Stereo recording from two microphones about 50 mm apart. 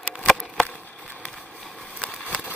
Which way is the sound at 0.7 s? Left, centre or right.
Left.